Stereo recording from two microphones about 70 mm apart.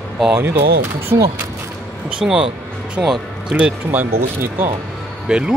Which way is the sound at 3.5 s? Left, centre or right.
Centre.